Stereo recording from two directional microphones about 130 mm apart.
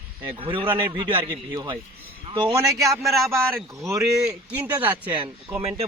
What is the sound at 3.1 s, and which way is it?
Speech, centre (ahead or behind).